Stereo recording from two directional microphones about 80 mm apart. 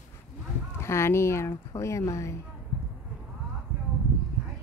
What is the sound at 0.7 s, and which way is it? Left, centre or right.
A woman's voice, left.